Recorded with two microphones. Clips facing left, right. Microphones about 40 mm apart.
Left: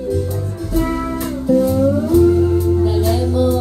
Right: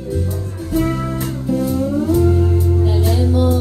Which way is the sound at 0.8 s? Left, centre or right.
Centre.